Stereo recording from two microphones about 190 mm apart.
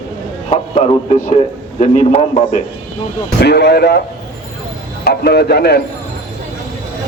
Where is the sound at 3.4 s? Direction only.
60° left (ahead or behind).